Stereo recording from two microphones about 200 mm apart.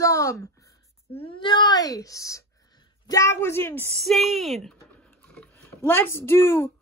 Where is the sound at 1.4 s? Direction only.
25° left (ahead or behind).